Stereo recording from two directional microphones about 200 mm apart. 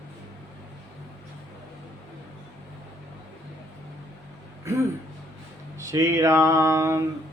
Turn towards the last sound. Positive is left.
turn(degrees=-15)  # may be behind; listen again after turning